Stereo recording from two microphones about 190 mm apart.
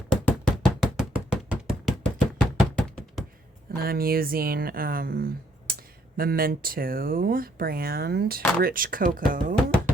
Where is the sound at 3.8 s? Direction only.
50° right (ahead or behind).